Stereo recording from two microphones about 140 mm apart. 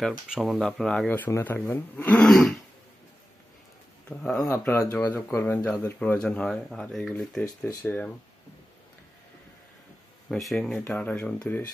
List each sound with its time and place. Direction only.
0.3 s speech: centre (ahead or behind)
4.2 s speech: 10° left (ahead or behind)
4.5 s speech: 20° left (ahead or behind)
10.3 s speech: 5° left (ahead or behind)